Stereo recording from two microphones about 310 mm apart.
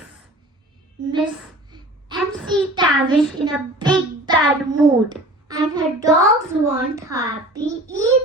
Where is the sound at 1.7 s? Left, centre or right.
Centre.